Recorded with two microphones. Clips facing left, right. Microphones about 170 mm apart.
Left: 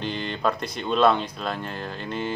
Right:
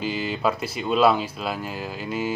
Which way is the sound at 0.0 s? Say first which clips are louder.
Right 2 dB; 5° right (ahead or behind).